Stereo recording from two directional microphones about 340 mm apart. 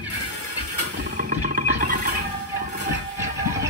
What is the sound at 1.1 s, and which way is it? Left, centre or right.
Music, right.